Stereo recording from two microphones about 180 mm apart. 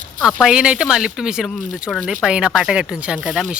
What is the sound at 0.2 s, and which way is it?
Speech, centre (ahead or behind).